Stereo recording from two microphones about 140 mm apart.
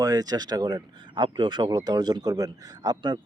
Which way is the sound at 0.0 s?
25° right (ahead or behind).